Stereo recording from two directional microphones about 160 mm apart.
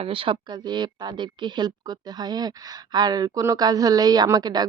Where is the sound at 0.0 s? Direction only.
35° right (ahead or behind).